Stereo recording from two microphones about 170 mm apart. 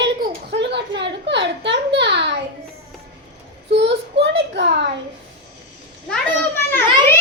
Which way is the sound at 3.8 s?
90° right.